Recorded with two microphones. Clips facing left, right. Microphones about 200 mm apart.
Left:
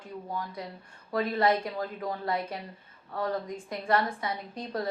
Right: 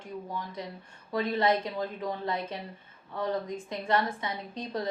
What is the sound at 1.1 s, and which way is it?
Speech, 20° right (ahead or behind).